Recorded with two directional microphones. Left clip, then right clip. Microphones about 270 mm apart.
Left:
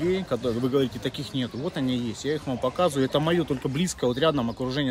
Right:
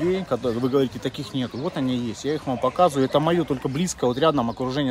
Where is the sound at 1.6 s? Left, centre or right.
Right.